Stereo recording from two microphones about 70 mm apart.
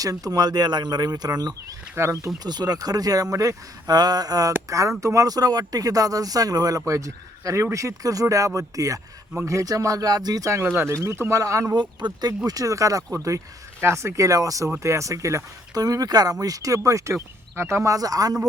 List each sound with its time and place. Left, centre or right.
0.0 s speech: right
2.0 s speech: right
2.4 s speech: right
4.7 s speech: right
10.6 s speech: right
11.8 s speech: right
12.5 s speech: right
13.8 s speech: right
17.9 s speech: right